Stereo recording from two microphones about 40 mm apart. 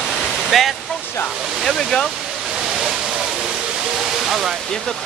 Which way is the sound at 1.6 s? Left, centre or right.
Centre.